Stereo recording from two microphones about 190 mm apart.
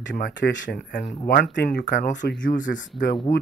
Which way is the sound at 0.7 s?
30° left (ahead or behind).